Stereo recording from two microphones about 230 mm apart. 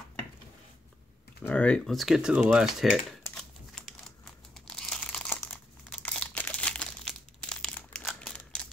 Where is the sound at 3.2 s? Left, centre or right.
Centre.